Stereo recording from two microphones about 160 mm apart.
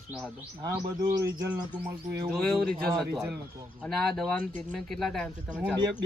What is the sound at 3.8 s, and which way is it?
Speech, 5° left (ahead or behind).